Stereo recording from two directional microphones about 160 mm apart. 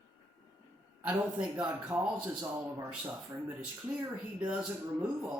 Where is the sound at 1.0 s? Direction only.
10° right (ahead or behind).